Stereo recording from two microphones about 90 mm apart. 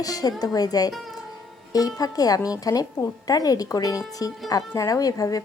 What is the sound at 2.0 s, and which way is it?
Speech, 45° left (ahead or behind).